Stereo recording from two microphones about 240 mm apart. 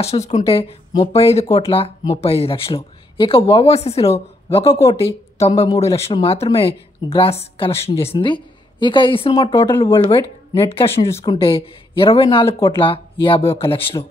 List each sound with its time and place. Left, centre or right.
0.0 s speech: left